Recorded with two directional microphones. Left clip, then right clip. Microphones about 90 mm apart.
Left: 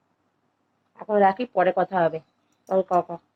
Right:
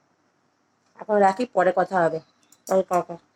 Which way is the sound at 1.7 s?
30° right (ahead or behind).